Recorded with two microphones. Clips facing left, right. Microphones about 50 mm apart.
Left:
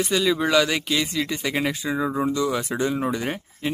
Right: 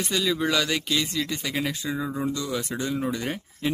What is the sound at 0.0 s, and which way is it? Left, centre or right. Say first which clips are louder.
Speech: left 4 dB; centre.